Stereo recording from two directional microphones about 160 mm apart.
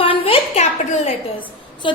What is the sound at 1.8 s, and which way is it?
Speech, 30° left (ahead or behind).